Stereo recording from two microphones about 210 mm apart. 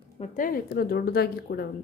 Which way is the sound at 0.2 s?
40° left (ahead or behind).